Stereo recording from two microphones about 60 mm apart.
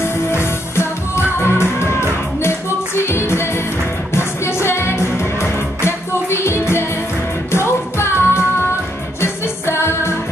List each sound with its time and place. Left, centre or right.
0.0 s music: left